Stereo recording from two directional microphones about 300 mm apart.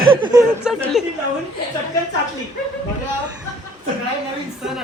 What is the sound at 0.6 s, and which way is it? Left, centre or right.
Speech, centre.